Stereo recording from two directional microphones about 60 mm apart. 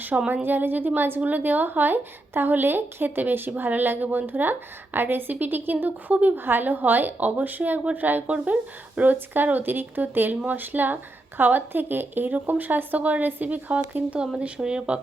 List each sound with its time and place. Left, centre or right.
0.1 s a woman's voice: right
0.4 s a woman's voice: right; by 14.9 s centre